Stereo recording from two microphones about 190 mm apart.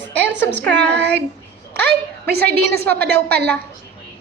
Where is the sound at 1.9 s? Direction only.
55° right (ahead or behind).